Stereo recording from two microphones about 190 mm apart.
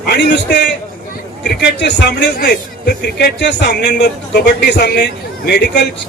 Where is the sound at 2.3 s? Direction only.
55° left (ahead or behind).